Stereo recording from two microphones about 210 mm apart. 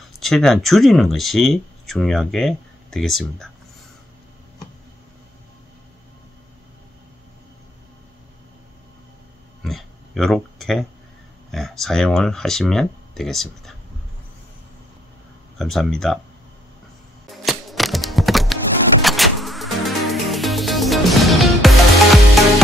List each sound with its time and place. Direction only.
0.2 s speech: centre (ahead or behind)
9.6 s a sound: centre (ahead or behind)
11.5 s speech: centre (ahead or behind)
15.5 s speech: centre (ahead or behind)
17.3 s a sound: centre (ahead or behind)
19.0 s music: centre (ahead or behind)